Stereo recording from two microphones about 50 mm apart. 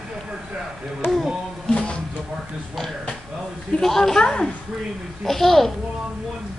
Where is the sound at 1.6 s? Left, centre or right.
Centre.